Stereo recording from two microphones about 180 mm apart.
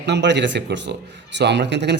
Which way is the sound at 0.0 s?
75° right (ahead or behind).